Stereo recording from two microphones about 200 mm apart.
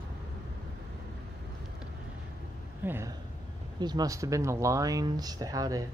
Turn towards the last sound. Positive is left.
turn(degrees=-15)  # may be behind; listen again after turning